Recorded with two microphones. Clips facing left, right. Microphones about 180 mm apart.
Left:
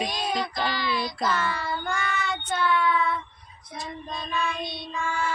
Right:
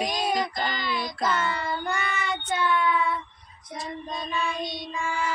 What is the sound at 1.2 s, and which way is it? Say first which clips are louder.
Child singing: right 2 dB; 20° right (ahead or behind).